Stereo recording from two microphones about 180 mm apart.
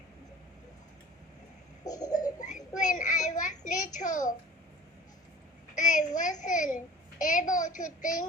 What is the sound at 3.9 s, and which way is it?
Speech, 45° left (ahead or behind).